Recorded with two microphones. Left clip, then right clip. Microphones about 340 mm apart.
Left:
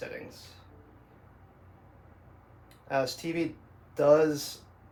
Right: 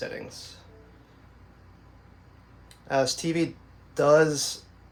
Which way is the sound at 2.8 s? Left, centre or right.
Right.